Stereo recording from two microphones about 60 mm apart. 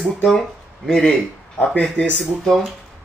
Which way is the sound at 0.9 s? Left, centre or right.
Centre.